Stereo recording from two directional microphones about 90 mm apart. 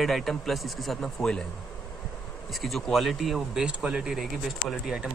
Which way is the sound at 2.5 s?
Centre (ahead or behind).